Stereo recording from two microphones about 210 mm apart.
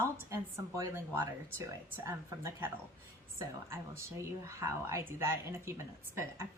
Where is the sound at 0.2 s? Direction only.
15° right (ahead or behind).